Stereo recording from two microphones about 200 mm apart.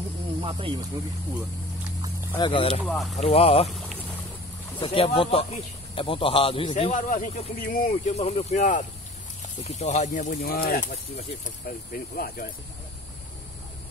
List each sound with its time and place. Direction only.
0.4 s speech: 25° right (ahead or behind)
2.3 s speech: 25° left (ahead or behind)
2.8 s speech: centre (ahead or behind)
3.2 s speech: 30° left (ahead or behind)
3.6 s boat: centre (ahead or behind)
4.7 s speech: 25° left (ahead or behind)
6.9 s speech: 40° left (ahead or behind)